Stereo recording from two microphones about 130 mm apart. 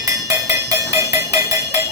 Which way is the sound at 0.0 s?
25° right (ahead or behind).